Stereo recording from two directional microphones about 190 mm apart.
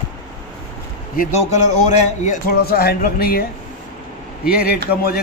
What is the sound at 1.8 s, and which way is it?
Speech, 40° left (ahead or behind).